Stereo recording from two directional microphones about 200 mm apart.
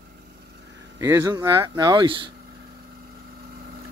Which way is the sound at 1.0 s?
15° right (ahead or behind).